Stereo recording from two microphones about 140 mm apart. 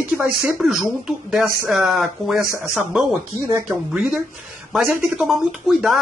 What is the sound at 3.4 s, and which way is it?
Speech, 20° right (ahead or behind).